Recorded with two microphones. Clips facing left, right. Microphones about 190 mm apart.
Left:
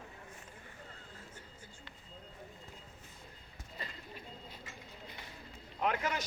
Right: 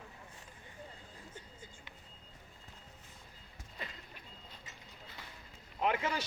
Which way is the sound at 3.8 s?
Centre (ahead or behind).